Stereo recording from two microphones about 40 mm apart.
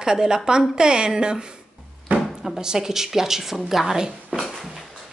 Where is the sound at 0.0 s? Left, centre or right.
Centre.